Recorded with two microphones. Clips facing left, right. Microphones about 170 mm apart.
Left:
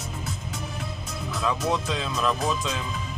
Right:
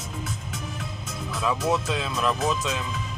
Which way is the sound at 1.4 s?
5° right (ahead or behind).